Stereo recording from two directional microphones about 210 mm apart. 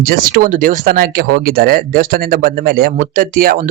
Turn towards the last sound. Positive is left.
turn(degrees=-40)  # may be behind; listen again after turning